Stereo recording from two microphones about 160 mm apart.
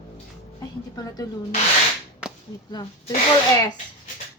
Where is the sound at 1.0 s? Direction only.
25° left (ahead or behind).